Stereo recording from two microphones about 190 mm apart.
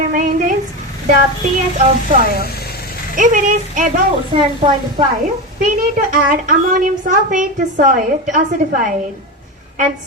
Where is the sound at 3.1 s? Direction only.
40° right (ahead or behind).